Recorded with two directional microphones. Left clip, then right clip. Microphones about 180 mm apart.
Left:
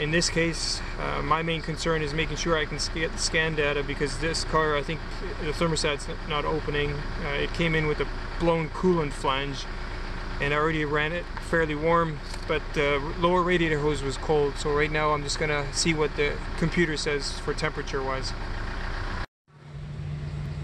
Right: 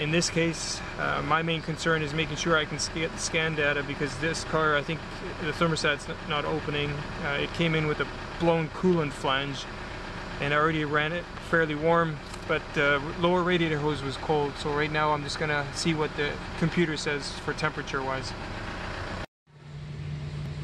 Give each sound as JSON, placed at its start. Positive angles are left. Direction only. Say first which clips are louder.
{"t": 0.0, "sound": "speech", "louder": "left 1 dB", "side_deg": 0}